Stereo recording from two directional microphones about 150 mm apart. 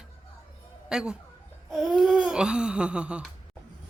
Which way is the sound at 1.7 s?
Centre (ahead or behind).